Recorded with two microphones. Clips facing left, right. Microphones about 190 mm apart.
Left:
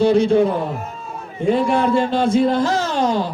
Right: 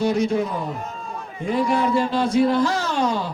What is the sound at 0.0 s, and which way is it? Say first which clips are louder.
Music: left 6 dB; 30° left (ahead or behind).